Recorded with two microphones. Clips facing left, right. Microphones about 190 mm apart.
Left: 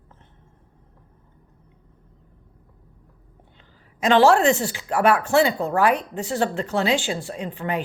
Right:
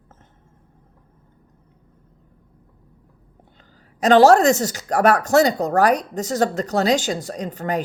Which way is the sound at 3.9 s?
40° right (ahead or behind).